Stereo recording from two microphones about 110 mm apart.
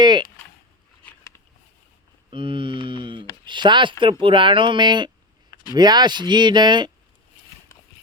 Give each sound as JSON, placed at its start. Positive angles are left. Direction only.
{"t": 0.0, "sound": "speech", "side_deg": -40}
{"t": 2.3, "sound": "speech", "side_deg": -50}
{"t": 7.7, "sound": "clip-clop", "side_deg": 30}